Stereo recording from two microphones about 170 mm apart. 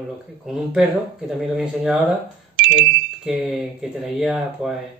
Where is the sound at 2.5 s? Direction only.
90° right.